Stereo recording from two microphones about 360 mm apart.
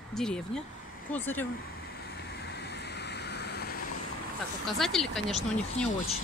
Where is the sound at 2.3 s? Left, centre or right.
Left.